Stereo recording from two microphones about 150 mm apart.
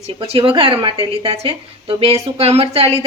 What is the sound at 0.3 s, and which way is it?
Speech, 40° right (ahead or behind).